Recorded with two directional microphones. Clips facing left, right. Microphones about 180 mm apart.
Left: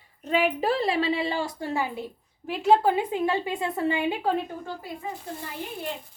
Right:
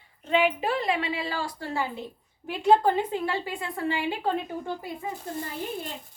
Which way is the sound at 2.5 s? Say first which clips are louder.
Even; 5° left (ahead or behind).